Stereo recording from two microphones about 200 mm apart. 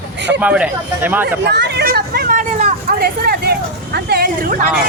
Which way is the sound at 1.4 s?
55° right (ahead or behind).